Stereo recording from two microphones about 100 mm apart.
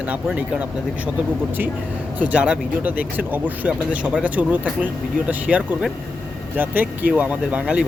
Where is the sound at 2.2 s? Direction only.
15° right (ahead or behind).